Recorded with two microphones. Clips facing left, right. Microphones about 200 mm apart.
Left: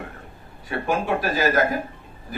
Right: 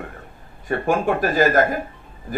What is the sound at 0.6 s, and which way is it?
A man's voice, 50° right (ahead or behind).